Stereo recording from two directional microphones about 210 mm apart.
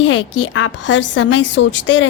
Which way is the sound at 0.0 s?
65° left (ahead or behind).